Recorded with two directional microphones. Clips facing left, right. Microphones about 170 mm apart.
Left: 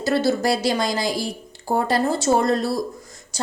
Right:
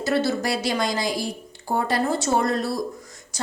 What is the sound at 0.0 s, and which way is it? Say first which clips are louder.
A woman's voice: left 3 dB; 35° left (ahead or behind).